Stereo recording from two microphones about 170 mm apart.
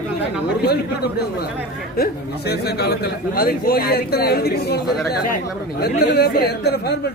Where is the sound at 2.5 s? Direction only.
75° left (ahead or behind).